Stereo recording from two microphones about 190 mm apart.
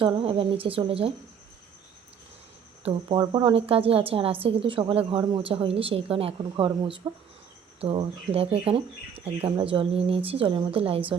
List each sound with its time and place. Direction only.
0.0 s a woman's voice: 30° right (ahead or behind)
2.8 s a woman's voice: 30° right (ahead or behind)